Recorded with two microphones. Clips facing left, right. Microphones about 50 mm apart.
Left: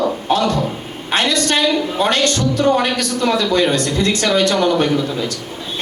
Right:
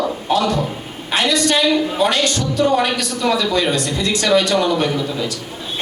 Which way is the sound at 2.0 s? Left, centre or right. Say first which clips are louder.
Left 1 dB; left.